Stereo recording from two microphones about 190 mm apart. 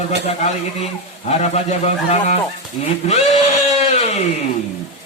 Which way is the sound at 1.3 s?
35° left (ahead or behind).